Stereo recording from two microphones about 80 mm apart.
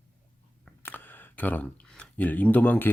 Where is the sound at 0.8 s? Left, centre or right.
Left.